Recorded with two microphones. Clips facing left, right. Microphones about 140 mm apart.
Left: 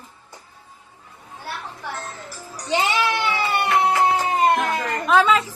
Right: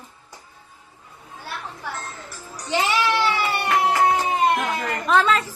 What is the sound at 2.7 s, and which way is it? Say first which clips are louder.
Music: even; 25° left (ahead or behind).